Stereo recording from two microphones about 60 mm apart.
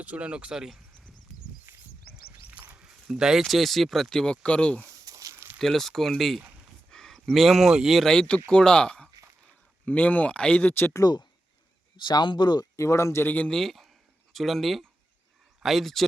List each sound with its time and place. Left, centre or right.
0.0 s speech: right
1.7 s a sound: right
2.6 s a sound: right
2.8 s speech: centre
5.0 s a sound: right
5.5 s speech: centre
8.0 s speech: centre
9.8 s speech: left
11.0 s speech: left
12.5 s speech: left
13.2 s speech: left
13.5 s speech: centre